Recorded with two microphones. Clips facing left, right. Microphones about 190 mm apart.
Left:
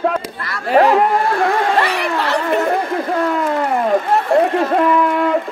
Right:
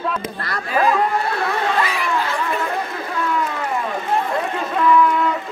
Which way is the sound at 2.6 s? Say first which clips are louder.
Left 7 dB; 50° left (ahead or behind).